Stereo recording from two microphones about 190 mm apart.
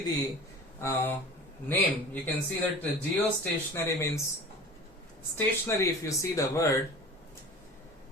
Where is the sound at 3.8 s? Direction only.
15° left (ahead or behind).